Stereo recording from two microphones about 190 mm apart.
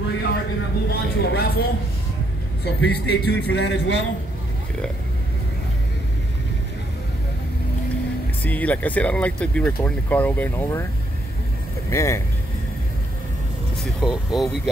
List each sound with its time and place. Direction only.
0.8 s a man's voice: 55° left (ahead or behind)
8.5 s speech: 10° left (ahead or behind)
11.9 s speech: 15° left (ahead or behind)
13.8 s speech: centre (ahead or behind)